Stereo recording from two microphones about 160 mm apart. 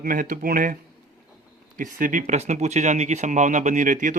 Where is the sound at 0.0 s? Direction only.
60° right (ahead or behind).